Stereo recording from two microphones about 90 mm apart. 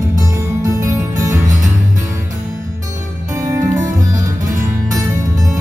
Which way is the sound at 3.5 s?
40° right (ahead or behind).